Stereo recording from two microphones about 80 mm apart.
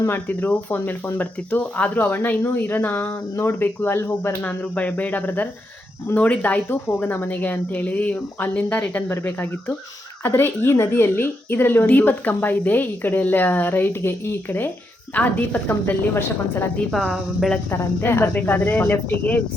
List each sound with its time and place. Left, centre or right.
0.1 s a woman's voice: left
4.4 s a woman's voice: centre
16.9 s speech: centre
17.7 s a woman's voice: left